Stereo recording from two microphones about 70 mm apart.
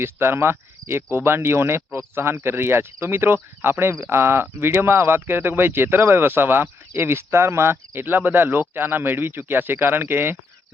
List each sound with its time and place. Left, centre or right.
0.0 s speech: right